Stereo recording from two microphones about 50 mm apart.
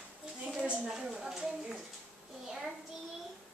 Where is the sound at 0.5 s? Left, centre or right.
Centre.